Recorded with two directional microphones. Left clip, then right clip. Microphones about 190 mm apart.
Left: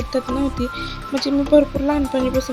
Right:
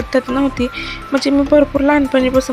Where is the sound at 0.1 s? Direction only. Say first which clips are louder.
Right 6 dB; centre (ahead or behind).